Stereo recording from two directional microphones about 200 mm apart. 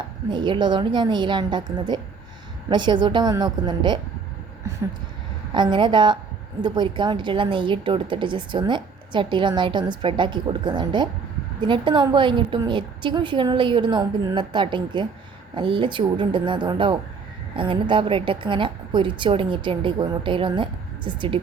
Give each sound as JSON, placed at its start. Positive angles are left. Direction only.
{"t": 0.3, "sound": "a woman's voice", "side_deg": -25}
{"t": 5.5, "sound": "a woman's voice", "side_deg": -25}